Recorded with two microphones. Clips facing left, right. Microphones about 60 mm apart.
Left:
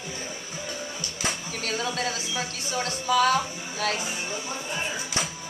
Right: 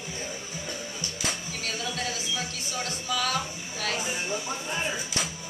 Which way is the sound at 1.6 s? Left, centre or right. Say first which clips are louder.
Left 4 dB; left.